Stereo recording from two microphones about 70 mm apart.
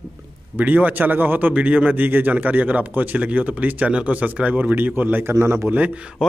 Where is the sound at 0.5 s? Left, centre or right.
Right.